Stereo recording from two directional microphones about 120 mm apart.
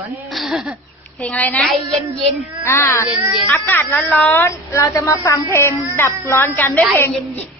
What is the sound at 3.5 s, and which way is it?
A woman's voice, 15° left (ahead or behind).